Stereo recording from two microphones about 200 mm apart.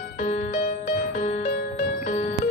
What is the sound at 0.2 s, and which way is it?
Music, 35° left (ahead or behind).